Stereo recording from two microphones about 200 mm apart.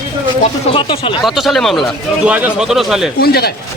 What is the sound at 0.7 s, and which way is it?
Speech, 25° left (ahead or behind).